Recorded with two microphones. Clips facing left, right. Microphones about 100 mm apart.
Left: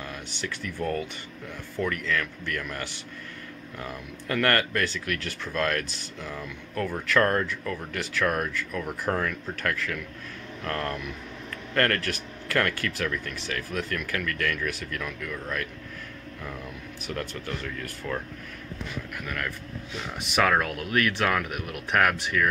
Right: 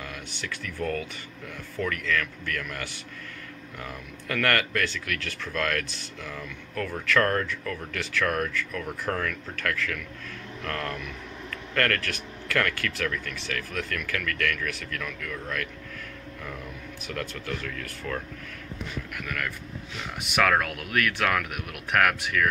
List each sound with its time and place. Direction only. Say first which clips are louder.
0.7 s speech: even; 25° left (ahead or behind)
3.8 s speech: left 2 dB; 15° left (ahead or behind)
17.1 s speech: even; 20° left (ahead or behind)
20.2 s speech: even; 5° right (ahead or behind)
20.6 s speech: left 2 dB; 30° left (ahead or behind)
21.9 s speech: even; centre (ahead or behind)